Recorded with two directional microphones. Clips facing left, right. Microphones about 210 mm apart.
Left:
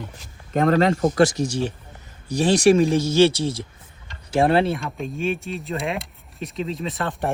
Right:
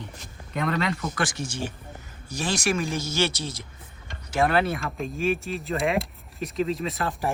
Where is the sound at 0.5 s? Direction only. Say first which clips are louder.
Left 9 dB; 45° left (ahead or behind).